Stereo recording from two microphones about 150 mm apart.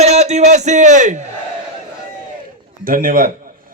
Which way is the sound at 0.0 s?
45° right (ahead or behind).